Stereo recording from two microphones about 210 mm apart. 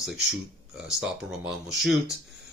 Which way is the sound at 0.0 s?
Centre (ahead or behind).